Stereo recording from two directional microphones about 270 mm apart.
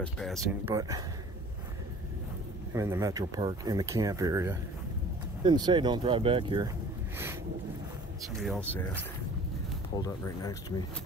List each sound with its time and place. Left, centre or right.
0.0 s speech: centre
0.7 s speech: centre
2.7 s speech: centre
8.2 s speech: centre
9.9 s speech: centre